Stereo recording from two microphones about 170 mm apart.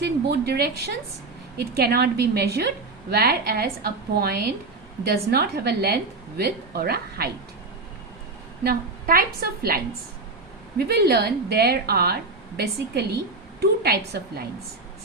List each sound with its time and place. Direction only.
0.0 s a woman's voice: 70° right (ahead or behind)
8.6 s a woman's voice: 60° right (ahead or behind)
10.8 s a woman's voice: 70° right (ahead or behind)